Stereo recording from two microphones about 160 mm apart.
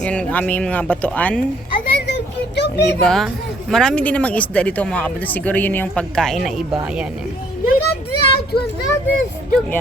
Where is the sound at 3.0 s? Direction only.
Centre (ahead or behind).